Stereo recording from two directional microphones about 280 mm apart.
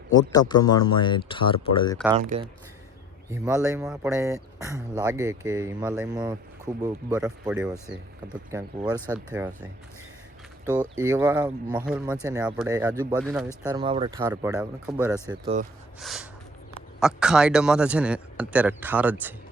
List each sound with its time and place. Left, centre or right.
0.1 s speech: centre
2.1 s speech: right
3.3 s speech: centre
6.8 s speech: centre
11.0 s speech: centre
13.6 s speech: centre
14.2 s speech: centre
15.3 s speech: right
16.0 s speech: centre